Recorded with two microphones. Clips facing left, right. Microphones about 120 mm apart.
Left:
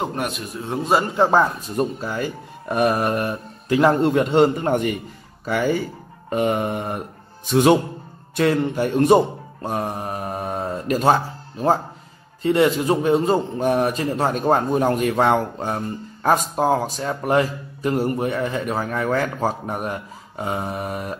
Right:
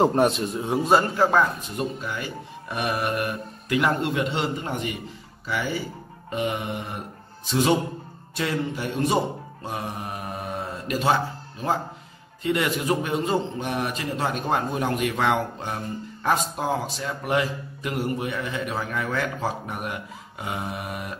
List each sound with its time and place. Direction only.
0.0 s a man's voice: 30° right (ahead or behind)
0.7 s a man's voice: centre (ahead or behind)
1.1 s a man's voice: 30° left (ahead or behind)
1.8 s a man's voice: 40° left (ahead or behind)
6.3 s mantra: 45° left (ahead or behind)
7.4 s a man's voice: 55° left (ahead or behind)
12.4 s a man's voice: 30° left (ahead or behind)